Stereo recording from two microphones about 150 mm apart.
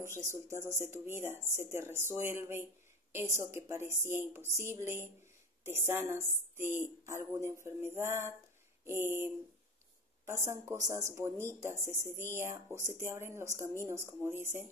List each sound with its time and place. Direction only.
0.0 s speech: 20° right (ahead or behind)